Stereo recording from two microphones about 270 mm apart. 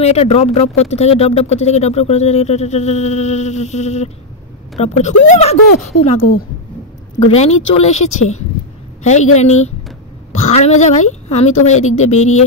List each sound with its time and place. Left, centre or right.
0.0 s speech: left
7.3 s speech: left